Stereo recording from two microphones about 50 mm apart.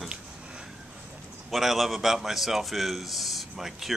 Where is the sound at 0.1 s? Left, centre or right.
Centre.